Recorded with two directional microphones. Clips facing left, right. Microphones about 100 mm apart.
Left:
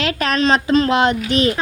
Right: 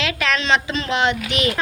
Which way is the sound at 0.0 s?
40° left (ahead or behind).